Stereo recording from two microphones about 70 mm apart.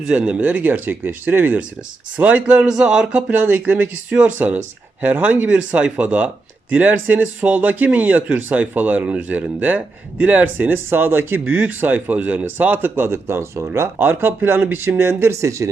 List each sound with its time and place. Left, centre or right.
0.1 s speech: centre; by 15.7 s right